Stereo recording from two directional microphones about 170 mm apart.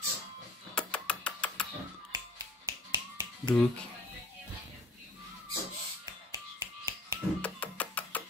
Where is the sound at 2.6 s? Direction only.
20° right (ahead or behind).